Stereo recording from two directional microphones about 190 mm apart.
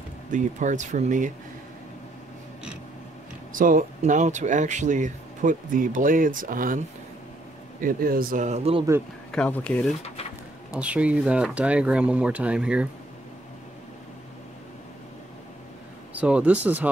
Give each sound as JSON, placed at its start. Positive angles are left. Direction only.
{"t": 0.3, "sound": "speech", "side_deg": -40}
{"t": 3.5, "sound": "speech", "side_deg": -45}
{"t": 7.8, "sound": "speech", "side_deg": -50}
{"t": 9.3, "sound": "speech", "side_deg": 5}
{"t": 10.7, "sound": "speech", "side_deg": -5}
{"t": 16.1, "sound": "speech", "side_deg": -5}